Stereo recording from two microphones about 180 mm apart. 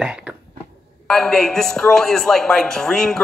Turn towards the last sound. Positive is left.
turn(degrees=5)  # may be behind; listen again after turning